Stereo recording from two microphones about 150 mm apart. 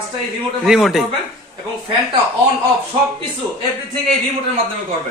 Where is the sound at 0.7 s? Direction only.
5° right (ahead or behind).